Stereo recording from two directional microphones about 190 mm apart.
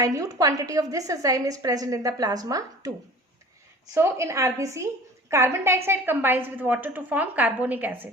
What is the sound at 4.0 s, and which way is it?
A woman's voice, 15° right (ahead or behind).